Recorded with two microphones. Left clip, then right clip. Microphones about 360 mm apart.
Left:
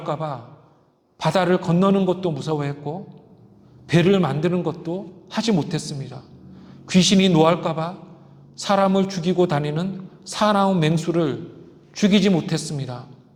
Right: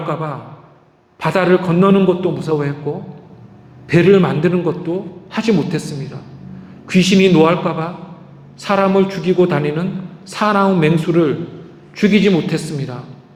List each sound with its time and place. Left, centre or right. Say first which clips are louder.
0.1 s a man's voice: even; left